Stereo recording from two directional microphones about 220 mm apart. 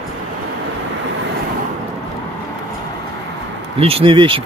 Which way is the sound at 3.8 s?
25° right (ahead or behind).